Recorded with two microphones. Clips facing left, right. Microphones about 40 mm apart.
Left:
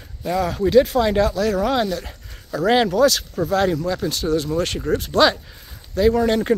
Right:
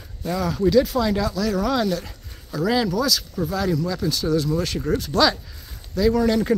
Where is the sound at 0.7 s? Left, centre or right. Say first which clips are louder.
Left 3 dB; left.